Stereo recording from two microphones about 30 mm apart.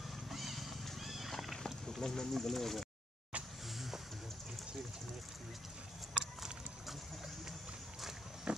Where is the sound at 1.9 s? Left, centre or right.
Centre.